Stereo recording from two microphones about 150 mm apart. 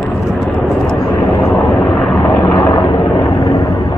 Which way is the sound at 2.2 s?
35° left (ahead or behind).